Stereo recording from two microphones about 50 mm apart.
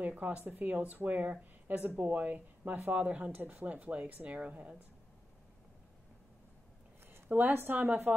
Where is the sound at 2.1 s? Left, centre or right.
Right.